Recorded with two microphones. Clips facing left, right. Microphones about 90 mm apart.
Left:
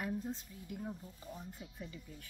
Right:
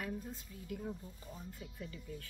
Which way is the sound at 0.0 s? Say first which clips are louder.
Left 3 dB; 20° left (ahead or behind).